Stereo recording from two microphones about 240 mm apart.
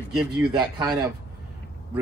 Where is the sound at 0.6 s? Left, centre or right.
Centre.